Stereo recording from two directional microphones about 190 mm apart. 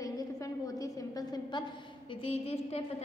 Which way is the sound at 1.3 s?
25° left (ahead or behind).